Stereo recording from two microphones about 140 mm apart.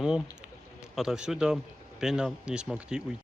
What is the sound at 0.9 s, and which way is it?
A man's voice, centre (ahead or behind).